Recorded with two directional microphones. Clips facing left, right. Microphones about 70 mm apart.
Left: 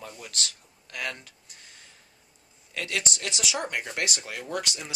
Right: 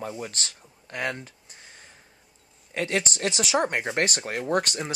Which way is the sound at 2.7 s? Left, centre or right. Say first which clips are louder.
Right 5 dB; right.